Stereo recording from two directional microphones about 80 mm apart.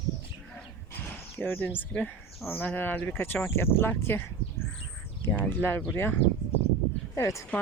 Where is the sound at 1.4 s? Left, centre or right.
Left.